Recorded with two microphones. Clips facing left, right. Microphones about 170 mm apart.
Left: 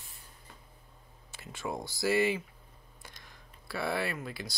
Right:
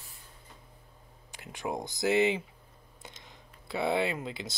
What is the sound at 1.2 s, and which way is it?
Speech, 15° right (ahead or behind).